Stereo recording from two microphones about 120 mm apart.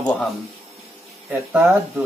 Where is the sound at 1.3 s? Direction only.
15° right (ahead or behind).